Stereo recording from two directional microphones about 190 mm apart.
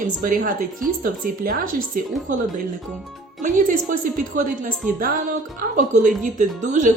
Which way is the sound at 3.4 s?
45° right (ahead or behind).